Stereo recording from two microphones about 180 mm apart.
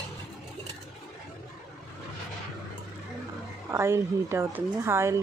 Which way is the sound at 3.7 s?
15° right (ahead or behind).